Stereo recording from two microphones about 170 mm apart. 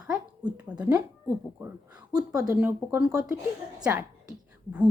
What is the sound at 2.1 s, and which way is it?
Speech, 20° right (ahead or behind).